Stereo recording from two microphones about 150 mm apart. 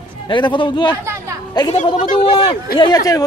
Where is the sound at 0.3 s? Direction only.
30° left (ahead or behind).